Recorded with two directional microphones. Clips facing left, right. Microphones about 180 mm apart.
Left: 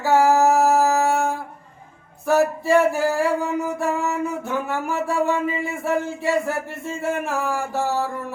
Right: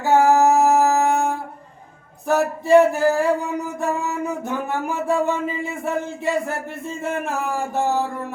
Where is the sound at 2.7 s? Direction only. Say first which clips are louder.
Right 6 dB; 20° right (ahead or behind).